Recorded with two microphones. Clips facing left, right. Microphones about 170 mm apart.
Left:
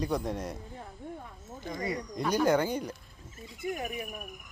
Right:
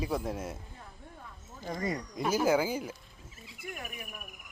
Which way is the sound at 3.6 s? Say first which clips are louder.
Left 8 dB; 25° left (ahead or behind).